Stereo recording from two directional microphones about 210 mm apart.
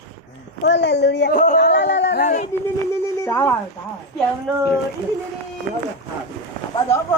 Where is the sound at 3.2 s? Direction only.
10° left (ahead or behind).